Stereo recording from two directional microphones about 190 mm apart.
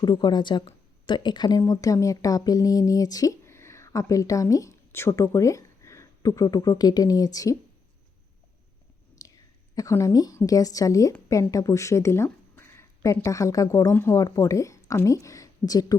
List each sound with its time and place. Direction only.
0.0 s speech: 20° left (ahead or behind)
9.2 s whispering: 20° left (ahead or behind)
9.7 s a woman's voice: 15° left (ahead or behind)